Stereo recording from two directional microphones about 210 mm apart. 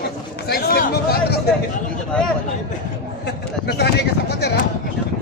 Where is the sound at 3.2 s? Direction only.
50° left (ahead or behind).